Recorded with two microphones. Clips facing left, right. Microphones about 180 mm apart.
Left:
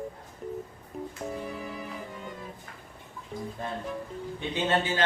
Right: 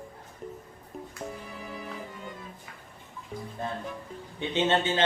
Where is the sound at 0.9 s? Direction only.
Centre (ahead or behind).